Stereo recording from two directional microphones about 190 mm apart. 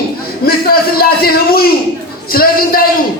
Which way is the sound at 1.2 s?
55° left (ahead or behind).